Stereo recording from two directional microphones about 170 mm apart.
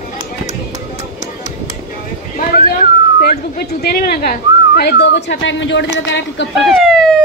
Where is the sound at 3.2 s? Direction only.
65° left (ahead or behind); by 6.4 s 90° left.